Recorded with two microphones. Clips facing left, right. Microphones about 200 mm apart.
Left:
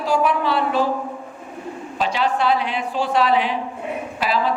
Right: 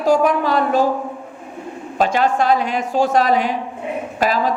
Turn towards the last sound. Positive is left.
turn(degrees=-45)  # may be behind; listen again after turning